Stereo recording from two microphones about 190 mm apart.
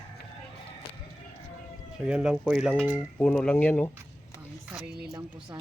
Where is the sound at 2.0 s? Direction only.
5° right (ahead or behind).